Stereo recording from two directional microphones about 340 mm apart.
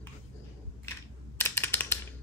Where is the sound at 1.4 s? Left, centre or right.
Centre.